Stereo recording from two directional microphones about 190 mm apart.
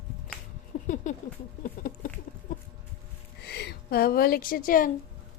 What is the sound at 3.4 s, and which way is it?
A woman's voice, 60° left (ahead or behind).